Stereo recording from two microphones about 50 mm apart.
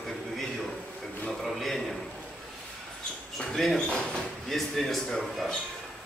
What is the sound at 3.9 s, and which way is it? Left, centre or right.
Speech, centre.